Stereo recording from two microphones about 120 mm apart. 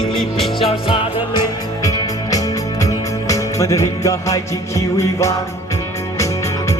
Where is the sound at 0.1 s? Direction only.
Centre (ahead or behind).